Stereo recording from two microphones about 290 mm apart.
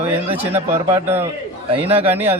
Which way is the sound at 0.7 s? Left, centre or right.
Centre.